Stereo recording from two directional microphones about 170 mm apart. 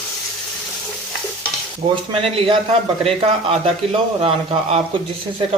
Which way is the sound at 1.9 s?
30° right (ahead or behind).